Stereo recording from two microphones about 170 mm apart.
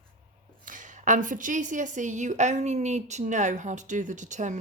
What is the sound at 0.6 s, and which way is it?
A woman's voice, 50° right (ahead or behind).